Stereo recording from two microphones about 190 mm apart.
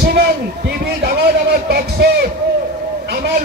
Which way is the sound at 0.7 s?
55° right (ahead or behind).